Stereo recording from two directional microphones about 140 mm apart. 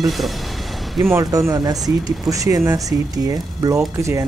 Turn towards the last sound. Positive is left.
turn(degrees=-20)  # may be behind; listen again after turning